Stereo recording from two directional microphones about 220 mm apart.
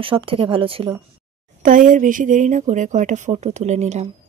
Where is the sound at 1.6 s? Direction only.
35° right (ahead or behind).